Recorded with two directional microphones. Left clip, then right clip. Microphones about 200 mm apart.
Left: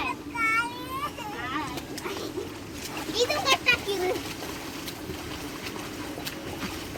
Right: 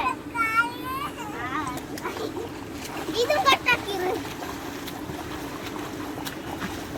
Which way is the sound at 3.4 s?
20° right (ahead or behind).